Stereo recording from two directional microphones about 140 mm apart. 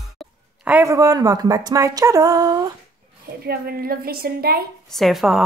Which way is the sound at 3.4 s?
90° right.